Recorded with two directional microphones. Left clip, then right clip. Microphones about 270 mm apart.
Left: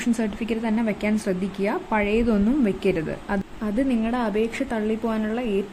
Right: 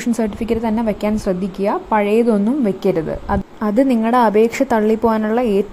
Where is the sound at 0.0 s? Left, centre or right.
Centre.